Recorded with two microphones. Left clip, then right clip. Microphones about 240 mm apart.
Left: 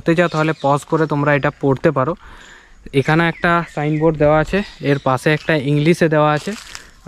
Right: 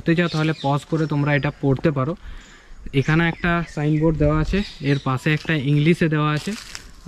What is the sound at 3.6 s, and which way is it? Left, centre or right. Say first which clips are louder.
Speech: left 5 dB; centre.